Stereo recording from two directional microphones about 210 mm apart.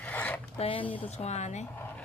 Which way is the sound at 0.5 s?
25° left (ahead or behind).